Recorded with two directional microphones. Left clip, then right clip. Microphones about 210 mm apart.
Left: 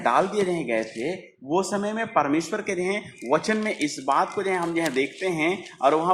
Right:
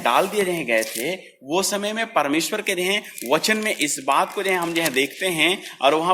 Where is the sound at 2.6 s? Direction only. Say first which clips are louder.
Right 4 dB; 50° right (ahead or behind).